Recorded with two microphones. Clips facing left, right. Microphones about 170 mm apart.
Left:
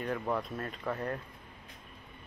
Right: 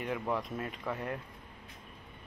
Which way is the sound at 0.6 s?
15° right (ahead or behind).